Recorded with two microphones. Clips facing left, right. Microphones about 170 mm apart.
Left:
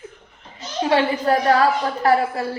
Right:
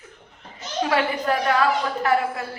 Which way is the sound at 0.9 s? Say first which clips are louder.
Left 5 dB; 30° left (ahead or behind).